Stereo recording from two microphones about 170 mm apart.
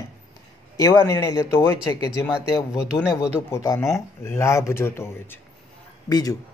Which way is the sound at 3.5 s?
15° left (ahead or behind).